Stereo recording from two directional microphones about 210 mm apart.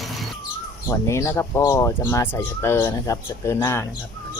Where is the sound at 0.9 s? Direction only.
15° left (ahead or behind).